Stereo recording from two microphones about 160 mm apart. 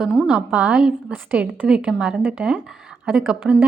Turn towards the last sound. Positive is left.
turn(degrees=-10)  # may be behind; listen again after turning